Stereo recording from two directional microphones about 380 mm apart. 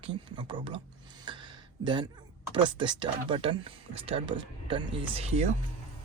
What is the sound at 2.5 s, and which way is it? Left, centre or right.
Speech, centre.